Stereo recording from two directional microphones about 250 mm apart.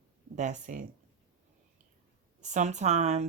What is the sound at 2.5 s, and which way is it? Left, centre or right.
Speech, right.